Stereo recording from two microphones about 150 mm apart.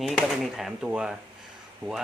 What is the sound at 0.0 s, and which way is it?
Speech, 5° right (ahead or behind).